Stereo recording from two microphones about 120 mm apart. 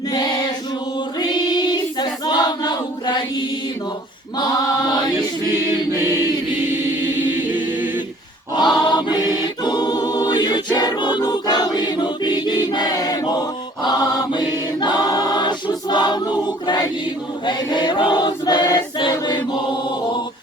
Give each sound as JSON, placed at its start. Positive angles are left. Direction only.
{"t": 0.1, "sound": "choir", "side_deg": 35}
{"t": 6.7, "sound": "chant", "side_deg": -20}
{"t": 8.7, "sound": "choir", "side_deg": 35}